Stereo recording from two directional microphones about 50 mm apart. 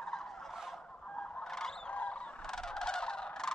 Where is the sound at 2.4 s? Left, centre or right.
Centre.